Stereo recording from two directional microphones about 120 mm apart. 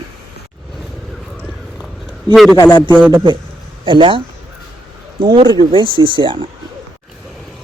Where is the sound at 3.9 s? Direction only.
45° right (ahead or behind).